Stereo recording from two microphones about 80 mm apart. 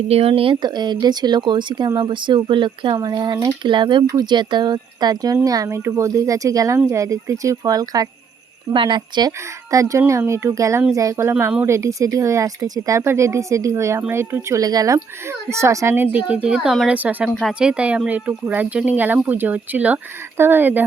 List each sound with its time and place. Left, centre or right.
0.5 s speech: right
2.0 s speech: right
3.0 s speech: right
3.6 s speech: right
4.1 s speech: right
5.4 s speech: right
8.7 s speech: right
9.7 s speech: right
14.6 s speech: right
15.4 s speech: right
16.2 s speech: centre
17.2 s speech: centre; by 20.8 s right